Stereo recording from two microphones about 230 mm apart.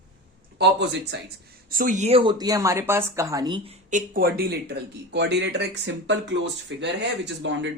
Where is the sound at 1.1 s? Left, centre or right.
Right.